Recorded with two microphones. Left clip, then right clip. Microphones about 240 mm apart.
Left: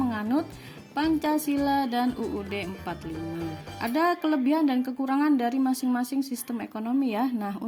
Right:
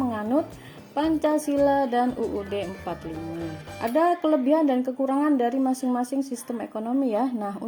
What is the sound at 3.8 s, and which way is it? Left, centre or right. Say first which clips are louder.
Speech: right 3 dB; left.